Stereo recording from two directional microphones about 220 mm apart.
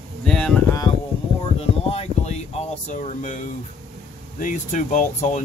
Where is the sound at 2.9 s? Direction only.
35° left (ahead or behind).